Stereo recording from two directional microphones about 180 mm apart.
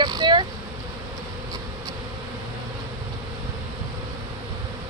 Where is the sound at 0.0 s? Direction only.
25° right (ahead or behind).